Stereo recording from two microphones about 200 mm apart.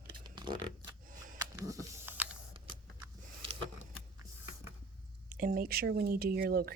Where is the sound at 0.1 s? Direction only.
25° right (ahead or behind).